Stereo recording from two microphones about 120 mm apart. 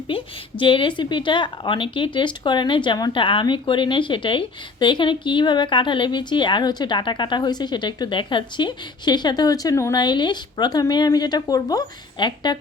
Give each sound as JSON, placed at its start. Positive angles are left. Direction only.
{"t": 0.1, "sound": "a woman's voice", "side_deg": 45}